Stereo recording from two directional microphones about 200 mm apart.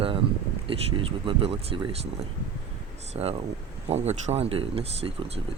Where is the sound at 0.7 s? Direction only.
25° right (ahead or behind).